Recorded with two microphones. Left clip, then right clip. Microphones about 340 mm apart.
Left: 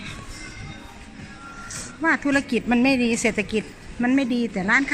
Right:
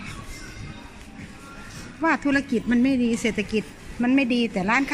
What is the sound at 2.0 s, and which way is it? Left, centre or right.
Speech, centre.